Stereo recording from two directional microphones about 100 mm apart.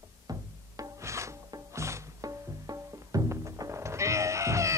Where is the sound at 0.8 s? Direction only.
30° right (ahead or behind).